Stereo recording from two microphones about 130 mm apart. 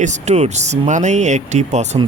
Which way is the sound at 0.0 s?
65° right (ahead or behind).